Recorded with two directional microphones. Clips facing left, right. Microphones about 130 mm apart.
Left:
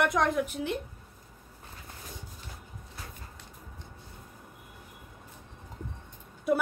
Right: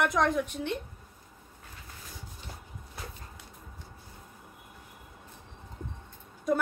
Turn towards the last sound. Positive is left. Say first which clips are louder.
# left 1 dB
turn(degrees=10)  # may be behind; listen again after turning